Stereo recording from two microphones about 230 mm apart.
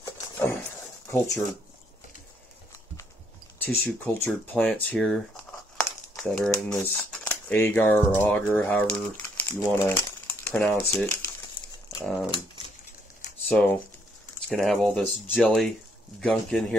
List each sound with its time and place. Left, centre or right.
0.0 s a sound: centre
1.1 s speech: centre
3.6 s speech: centre
13.5 s speech: centre